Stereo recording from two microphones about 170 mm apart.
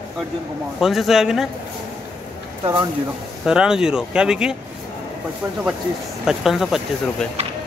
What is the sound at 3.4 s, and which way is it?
A man's voice, 5° right (ahead or behind).